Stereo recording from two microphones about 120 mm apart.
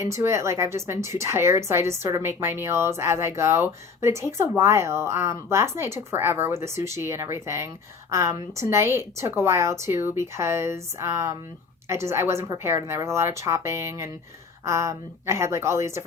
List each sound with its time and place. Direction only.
0.0 s a woman's voice: 25° right (ahead or behind)